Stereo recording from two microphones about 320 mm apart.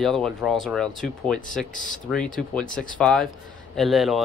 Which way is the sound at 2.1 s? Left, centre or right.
Centre.